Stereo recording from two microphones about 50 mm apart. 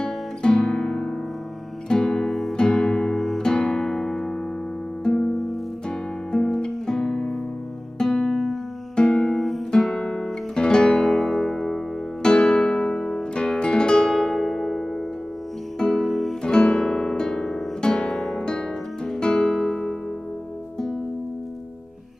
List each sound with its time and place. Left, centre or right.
0.0 s guitar: centre
1.9 s music: centre
2.5 s music: centre
3.2 s music: centre
3.4 s music: centre
8.9 s music: centre
9.3 s music: centre
9.7 s guitar: centre
14.0 s music: centre
16.4 s guitar: centre
18.1 s music: centre